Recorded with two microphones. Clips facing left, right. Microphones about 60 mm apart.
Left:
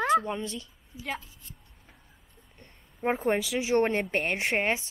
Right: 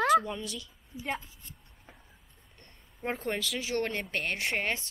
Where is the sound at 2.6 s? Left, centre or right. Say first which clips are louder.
Left 6 dB; centre.